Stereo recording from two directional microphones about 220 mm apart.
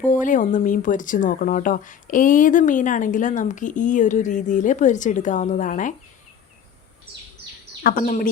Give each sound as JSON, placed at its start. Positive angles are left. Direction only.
{"t": 0.1, "sound": "speech", "side_deg": 35}
{"t": 7.9, "sound": "speech", "side_deg": 40}